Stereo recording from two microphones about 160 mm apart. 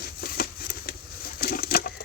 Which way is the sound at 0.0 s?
70° left (ahead or behind).